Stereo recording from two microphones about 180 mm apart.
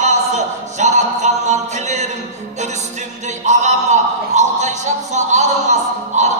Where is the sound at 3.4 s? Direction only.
40° right (ahead or behind).